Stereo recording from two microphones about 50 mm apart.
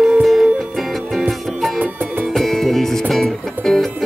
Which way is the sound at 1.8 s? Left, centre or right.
Right.